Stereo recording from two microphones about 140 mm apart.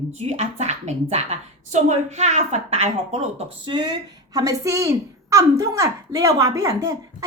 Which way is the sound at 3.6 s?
30° right (ahead or behind).